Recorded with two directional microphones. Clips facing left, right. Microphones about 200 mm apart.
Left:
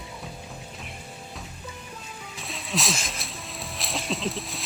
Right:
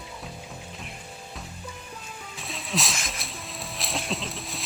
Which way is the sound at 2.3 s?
Centre (ahead or behind).